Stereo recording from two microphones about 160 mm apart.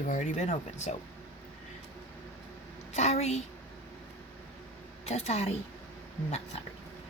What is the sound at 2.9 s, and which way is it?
Speech, 45° left (ahead or behind).